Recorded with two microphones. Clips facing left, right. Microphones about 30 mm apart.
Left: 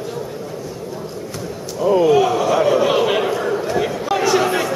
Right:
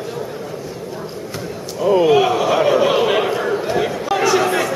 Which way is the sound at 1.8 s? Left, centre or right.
Centre.